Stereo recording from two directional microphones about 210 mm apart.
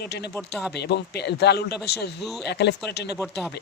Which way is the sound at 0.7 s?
50° left (ahead or behind).